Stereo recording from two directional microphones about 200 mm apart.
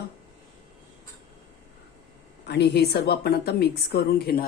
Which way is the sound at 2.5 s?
55° left (ahead or behind).